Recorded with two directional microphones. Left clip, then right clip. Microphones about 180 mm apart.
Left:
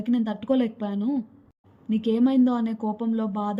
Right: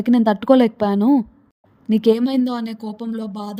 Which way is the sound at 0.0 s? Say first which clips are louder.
Right 10 dB; 55° right (ahead or behind).